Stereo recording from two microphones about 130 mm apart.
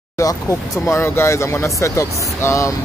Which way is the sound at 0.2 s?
25° left (ahead or behind).